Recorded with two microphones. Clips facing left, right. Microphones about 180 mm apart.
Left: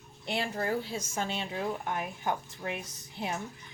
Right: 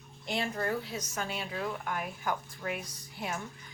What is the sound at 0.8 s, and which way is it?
A woman's voice, 30° left (ahead or behind).